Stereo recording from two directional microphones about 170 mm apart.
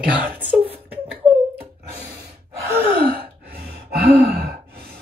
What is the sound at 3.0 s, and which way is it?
Sigh, 60° right (ahead or behind).